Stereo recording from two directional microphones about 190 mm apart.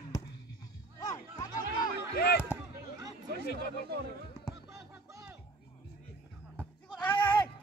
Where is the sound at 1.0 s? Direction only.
20° left (ahead or behind).